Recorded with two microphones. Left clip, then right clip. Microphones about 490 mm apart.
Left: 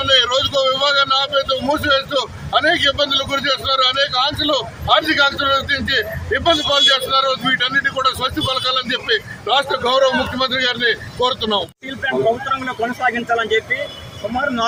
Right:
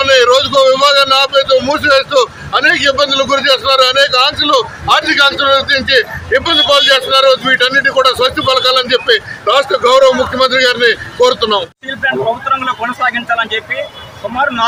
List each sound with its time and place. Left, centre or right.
0.0 s a man's voice: left